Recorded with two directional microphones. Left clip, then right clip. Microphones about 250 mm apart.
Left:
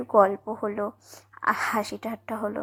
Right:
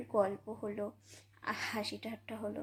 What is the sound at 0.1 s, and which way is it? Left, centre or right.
Speech, centre.